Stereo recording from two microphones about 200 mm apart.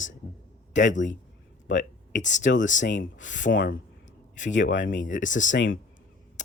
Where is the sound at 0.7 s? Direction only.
65° left (ahead or behind).